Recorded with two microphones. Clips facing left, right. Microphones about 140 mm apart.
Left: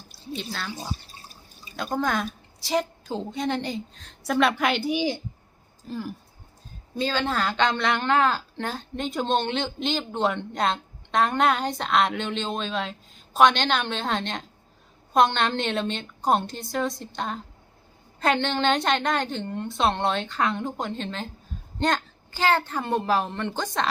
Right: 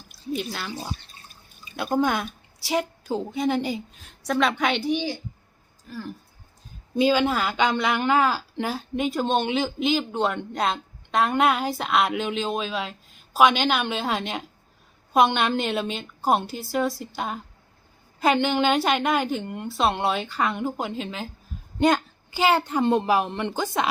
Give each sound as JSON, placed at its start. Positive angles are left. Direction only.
{"t": 0.5, "sound": "a woman's voice", "side_deg": -5}
{"t": 1.1, "sound": "drip", "side_deg": 30}
{"t": 1.7, "sound": "a woman's voice", "side_deg": -5}
{"t": 4.2, "sound": "a woman's voice", "side_deg": 0}
{"t": 5.9, "sound": "speech", "side_deg": 30}
{"t": 6.9, "sound": "a woman's voice", "side_deg": -10}